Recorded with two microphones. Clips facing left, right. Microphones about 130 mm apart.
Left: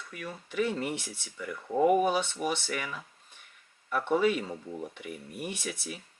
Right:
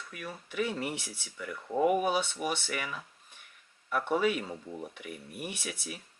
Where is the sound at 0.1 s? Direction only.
10° right (ahead or behind).